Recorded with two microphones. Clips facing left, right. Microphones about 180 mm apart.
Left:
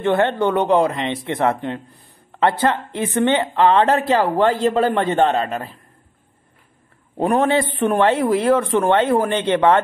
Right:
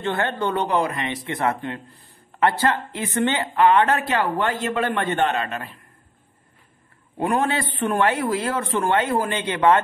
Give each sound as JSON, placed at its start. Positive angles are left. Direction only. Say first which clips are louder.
{"t": 0.0, "sound": "speech", "louder": "left 7 dB", "side_deg": 20}
{"t": 7.2, "sound": "speech", "louder": "left 5 dB", "side_deg": 25}